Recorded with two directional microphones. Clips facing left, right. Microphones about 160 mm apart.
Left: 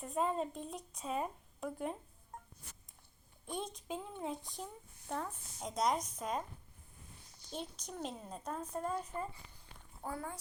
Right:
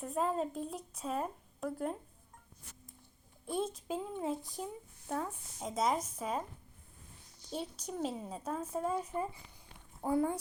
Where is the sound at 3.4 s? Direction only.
5° right (ahead or behind).